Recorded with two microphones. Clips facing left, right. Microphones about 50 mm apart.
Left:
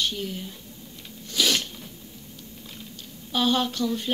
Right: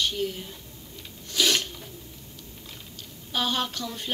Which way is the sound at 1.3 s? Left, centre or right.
Right.